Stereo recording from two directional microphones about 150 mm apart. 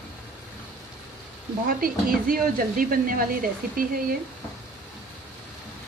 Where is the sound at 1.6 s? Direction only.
70° right (ahead or behind).